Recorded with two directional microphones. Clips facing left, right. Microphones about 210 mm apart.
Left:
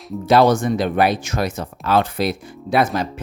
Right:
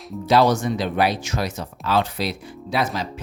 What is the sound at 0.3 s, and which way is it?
Speech, 55° left (ahead or behind).